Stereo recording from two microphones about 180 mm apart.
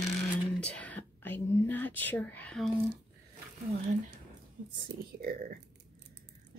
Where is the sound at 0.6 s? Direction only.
10° left (ahead or behind).